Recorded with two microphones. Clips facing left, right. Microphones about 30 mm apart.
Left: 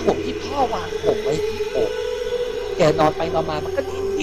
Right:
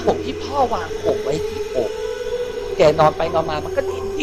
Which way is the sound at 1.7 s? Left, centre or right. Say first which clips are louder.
Even; left.